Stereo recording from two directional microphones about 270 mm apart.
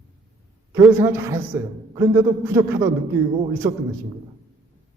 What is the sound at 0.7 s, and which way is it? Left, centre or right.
A man's voice, centre.